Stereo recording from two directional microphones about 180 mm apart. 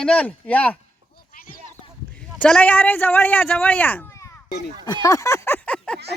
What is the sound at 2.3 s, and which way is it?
Speech, 5° left (ahead or behind).